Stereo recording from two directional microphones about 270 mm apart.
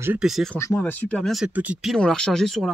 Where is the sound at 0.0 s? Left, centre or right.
Centre.